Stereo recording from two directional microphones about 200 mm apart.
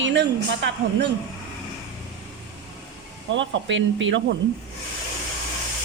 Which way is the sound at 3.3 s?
65° right (ahead or behind).